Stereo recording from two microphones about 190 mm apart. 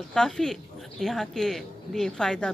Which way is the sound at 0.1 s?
5° left (ahead or behind).